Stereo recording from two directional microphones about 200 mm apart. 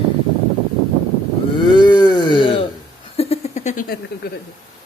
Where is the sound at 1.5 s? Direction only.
25° left (ahead or behind); by 3.9 s 40° left (ahead or behind).